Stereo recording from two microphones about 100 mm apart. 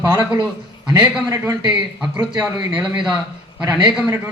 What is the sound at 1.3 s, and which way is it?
Speech, 35° right (ahead or behind).